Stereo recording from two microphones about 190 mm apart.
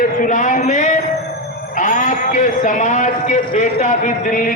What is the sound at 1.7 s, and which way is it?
A man's voice, 40° left (ahead or behind).